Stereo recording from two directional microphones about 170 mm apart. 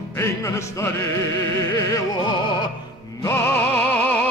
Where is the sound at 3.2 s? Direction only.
15° left (ahead or behind).